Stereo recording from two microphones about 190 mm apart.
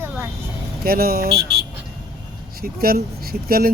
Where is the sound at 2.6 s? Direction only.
50° right (ahead or behind).